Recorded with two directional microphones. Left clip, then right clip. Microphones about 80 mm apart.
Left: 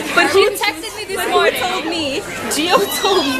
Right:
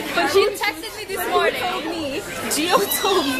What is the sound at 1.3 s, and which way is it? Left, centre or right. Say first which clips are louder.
Speech: left 5 dB; centre.